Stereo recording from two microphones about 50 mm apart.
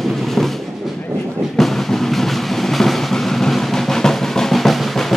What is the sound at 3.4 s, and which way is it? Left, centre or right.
Drum roll, centre.